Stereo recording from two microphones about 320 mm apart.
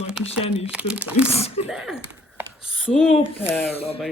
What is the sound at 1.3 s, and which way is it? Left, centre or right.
Speech, centre.